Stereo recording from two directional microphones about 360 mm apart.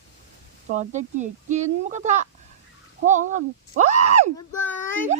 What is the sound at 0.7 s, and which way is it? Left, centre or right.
Speech, centre.